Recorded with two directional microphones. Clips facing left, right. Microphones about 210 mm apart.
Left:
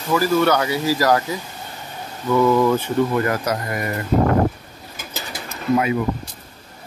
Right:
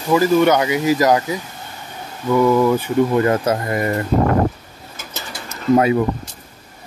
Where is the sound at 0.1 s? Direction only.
15° right (ahead or behind).